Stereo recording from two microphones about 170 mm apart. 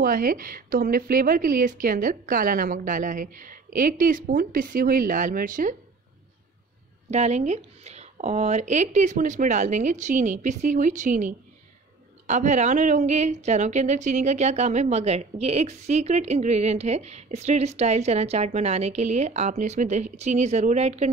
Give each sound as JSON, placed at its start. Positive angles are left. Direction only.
{"t": 0.0, "sound": "a woman's voice", "side_deg": -55}
{"t": 7.1, "sound": "a woman's voice", "side_deg": -40}